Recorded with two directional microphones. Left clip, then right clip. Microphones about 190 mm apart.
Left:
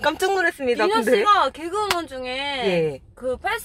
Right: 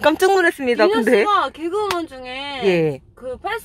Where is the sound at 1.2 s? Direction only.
10° left (ahead or behind).